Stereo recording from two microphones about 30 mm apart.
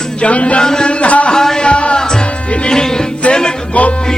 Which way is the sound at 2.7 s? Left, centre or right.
Left.